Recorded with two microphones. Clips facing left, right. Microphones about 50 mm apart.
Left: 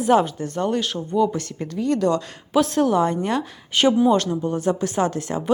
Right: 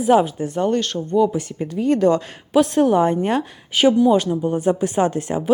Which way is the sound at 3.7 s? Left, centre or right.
Centre.